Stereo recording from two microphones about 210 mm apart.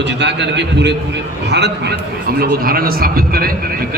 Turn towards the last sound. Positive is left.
turn(degrees=-45)  # may be behind; listen again after turning